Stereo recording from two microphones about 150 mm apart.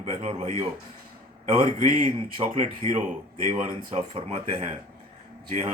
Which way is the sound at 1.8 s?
60° right (ahead or behind).